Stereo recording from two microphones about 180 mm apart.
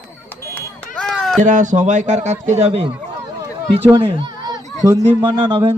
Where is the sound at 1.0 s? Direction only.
Centre (ahead or behind).